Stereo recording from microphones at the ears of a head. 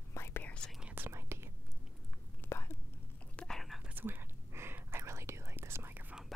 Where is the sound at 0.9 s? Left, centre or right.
Right.